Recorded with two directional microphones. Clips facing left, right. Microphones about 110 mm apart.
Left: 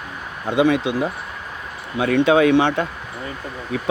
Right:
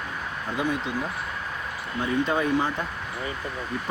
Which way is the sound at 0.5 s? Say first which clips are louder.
Left 11 dB; 90° left.